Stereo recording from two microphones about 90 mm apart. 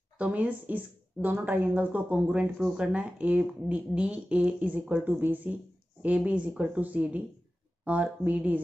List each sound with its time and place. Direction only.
0.2 s speech: 15° right (ahead or behind)